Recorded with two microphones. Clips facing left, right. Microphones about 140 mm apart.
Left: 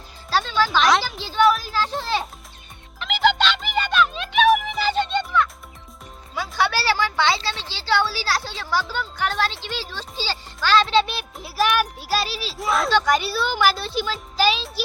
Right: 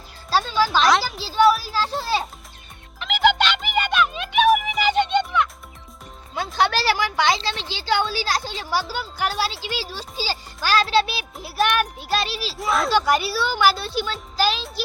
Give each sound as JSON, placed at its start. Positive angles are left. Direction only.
{"t": 0.3, "sound": "a child's voice", "side_deg": -10}
{"t": 3.2, "sound": "music", "side_deg": -10}
{"t": 4.8, "sound": "music", "side_deg": -15}
{"t": 6.3, "sound": "a child's voice", "side_deg": -20}